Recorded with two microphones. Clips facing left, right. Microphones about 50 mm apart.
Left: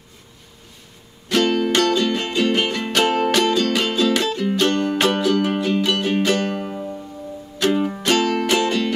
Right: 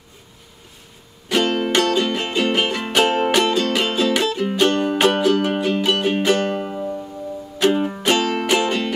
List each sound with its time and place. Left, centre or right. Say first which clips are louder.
1.3 s music: even; centre